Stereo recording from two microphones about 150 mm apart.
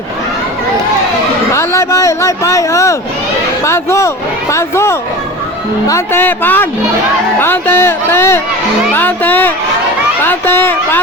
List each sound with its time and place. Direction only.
1.5 s speech: 20° left (ahead or behind)